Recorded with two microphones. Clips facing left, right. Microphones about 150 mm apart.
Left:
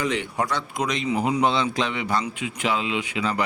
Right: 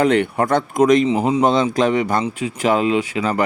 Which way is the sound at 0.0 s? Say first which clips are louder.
Right 9 dB; 60° right (ahead or behind).